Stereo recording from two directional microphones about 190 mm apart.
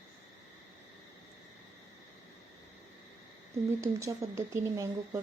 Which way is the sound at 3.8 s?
15° right (ahead or behind).